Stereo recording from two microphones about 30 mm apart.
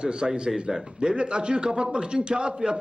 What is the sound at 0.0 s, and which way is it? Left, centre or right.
A woman's voice, right.